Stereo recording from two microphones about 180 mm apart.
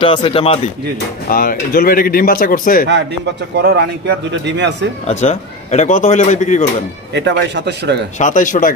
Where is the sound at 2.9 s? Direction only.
75° right (ahead or behind).